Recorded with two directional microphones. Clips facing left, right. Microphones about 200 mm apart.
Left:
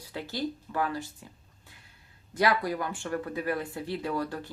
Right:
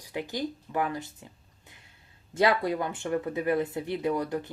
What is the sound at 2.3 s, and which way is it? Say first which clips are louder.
A woman's voice: right 2 dB; 25° right (ahead or behind).